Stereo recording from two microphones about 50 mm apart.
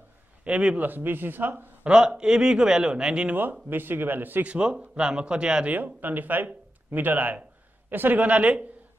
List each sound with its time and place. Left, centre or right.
0.4 s a man's voice: right
0.7 s speech: right
1.9 s speech: centre
3.6 s speech: right
4.5 s a man's voice: right
5.7 s speech: right